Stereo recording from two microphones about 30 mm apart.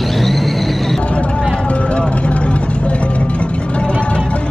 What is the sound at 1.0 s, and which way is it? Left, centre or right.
Vehicle, left.